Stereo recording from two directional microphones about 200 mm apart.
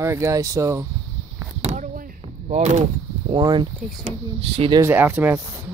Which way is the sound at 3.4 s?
20° right (ahead or behind).